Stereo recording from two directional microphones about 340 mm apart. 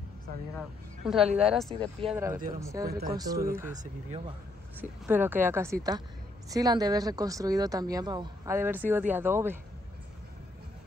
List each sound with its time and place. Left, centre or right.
0.6 s speech: centre
3.7 s speech: right
4.7 s speech: centre